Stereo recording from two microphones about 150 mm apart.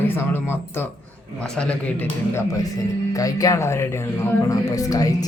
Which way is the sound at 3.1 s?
25° left (ahead or behind).